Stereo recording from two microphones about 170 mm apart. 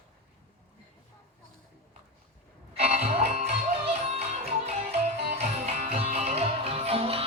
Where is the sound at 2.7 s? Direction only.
40° right (ahead or behind).